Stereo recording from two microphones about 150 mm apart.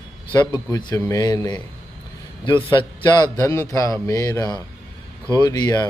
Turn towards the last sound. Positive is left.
turn(degrees=25)  # may be behind; listen again after turning